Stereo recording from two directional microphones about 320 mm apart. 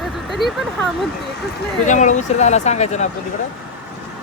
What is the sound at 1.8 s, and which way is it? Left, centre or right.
Speech, left.